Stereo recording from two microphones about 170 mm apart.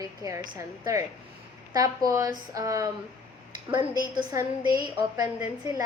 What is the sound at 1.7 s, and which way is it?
A woman's voice, 20° right (ahead or behind).